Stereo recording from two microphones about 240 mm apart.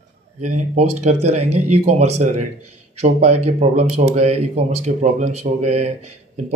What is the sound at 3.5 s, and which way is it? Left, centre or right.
Speech, right.